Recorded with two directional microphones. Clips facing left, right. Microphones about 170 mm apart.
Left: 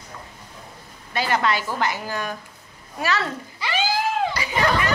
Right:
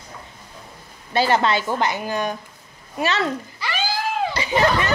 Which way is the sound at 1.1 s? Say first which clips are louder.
Right 4 dB; 30° right (ahead or behind).